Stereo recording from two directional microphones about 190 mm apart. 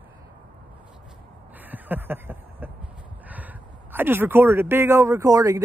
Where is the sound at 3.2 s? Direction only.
10° right (ahead or behind).